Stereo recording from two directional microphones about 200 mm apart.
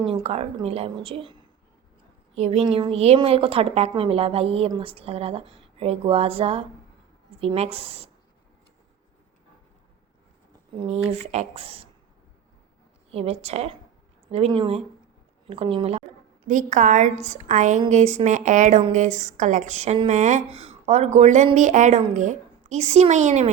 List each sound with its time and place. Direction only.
0.1 s a woman's voice: 30° right (ahead or behind)
10.8 s a woman's voice: 35° right (ahead or behind)
13.1 s a woman's voice: 30° right (ahead or behind)